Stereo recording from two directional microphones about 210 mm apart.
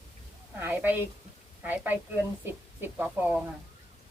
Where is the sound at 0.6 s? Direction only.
10° right (ahead or behind).